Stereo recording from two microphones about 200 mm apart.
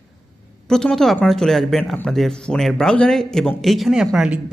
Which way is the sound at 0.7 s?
5° left (ahead or behind).